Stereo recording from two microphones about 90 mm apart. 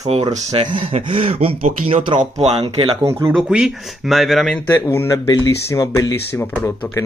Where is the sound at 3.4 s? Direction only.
10° right (ahead or behind).